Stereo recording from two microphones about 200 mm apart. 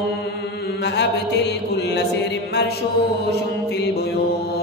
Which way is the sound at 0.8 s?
60° left (ahead or behind).